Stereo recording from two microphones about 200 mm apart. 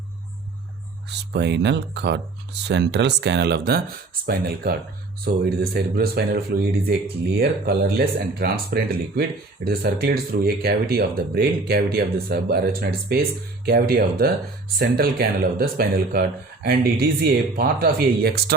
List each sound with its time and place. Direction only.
1.3 s a man's voice: 60° right (ahead or behind)